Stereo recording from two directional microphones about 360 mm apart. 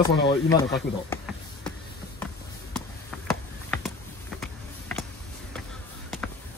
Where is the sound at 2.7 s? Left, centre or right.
Centre.